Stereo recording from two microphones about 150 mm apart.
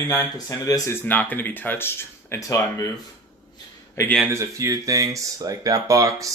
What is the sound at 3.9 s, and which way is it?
Speech, 15° left (ahead or behind).